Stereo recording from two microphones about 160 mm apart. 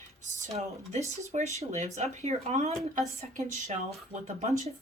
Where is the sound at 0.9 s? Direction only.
45° right (ahead or behind).